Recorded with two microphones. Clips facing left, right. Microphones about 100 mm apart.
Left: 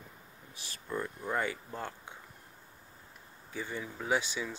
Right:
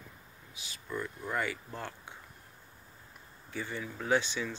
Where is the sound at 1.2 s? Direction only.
20° left (ahead or behind).